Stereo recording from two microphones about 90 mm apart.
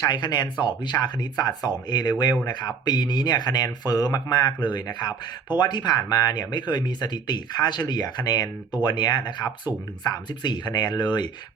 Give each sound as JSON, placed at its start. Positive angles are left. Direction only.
{"t": 0.0, "sound": "speech", "side_deg": 55}